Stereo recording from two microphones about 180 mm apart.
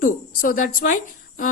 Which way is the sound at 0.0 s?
50° left (ahead or behind).